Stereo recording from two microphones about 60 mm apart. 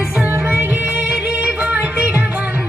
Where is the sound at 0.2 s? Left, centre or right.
Centre.